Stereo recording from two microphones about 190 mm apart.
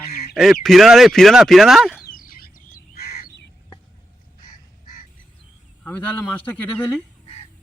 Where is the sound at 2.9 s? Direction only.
55° left (ahead or behind).